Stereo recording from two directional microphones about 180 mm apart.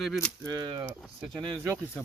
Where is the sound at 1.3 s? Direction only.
20° right (ahead or behind).